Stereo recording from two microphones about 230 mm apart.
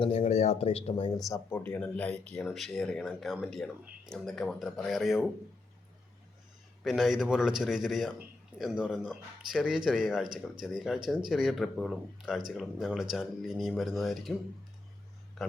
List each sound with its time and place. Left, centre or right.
0.0 s speech: left
1.3 s speech: centre
6.8 s speech: centre